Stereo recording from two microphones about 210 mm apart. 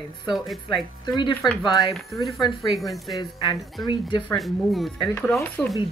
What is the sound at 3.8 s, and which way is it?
Speech, 20° left (ahead or behind).